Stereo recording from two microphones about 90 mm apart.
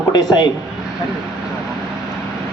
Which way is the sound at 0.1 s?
50° left (ahead or behind).